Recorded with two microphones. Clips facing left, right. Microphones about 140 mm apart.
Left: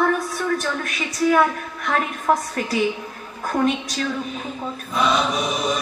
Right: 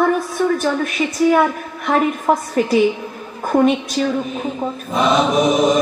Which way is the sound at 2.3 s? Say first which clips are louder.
Right 1 dB; 25° right (ahead or behind).